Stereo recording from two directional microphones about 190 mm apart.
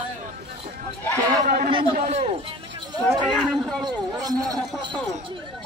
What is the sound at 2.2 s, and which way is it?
Speech, 30° right (ahead or behind).